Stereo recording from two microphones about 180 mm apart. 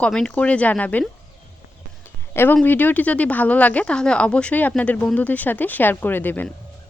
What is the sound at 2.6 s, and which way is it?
A woman's voice, 10° left (ahead or behind).